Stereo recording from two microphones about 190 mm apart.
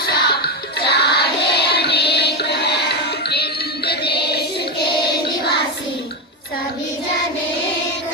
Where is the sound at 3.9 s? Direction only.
60° left (ahead or behind).